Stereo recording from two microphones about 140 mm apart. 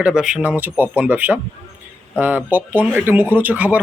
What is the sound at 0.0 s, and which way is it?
Speech, 5° right (ahead or behind).